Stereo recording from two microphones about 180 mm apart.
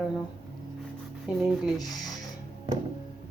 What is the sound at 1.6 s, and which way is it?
Speech, centre (ahead or behind).